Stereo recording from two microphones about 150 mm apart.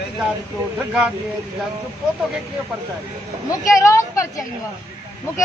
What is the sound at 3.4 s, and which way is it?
Speech, 20° left (ahead or behind).